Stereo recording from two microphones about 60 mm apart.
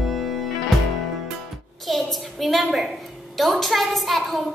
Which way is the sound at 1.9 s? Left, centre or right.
Centre.